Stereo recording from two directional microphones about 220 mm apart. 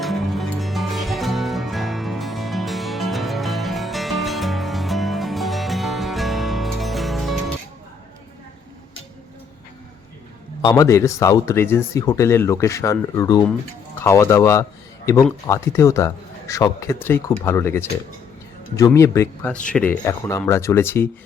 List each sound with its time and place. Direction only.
0.0 s music: centre (ahead or behind)
10.6 s speech: 15° left (ahead or behind)